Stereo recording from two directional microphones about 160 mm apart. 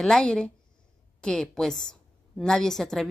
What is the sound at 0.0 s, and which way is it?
A woman's voice, 5° left (ahead or behind).